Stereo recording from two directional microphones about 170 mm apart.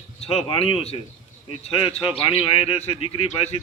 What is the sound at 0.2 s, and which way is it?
A man's voice, 35° left (ahead or behind).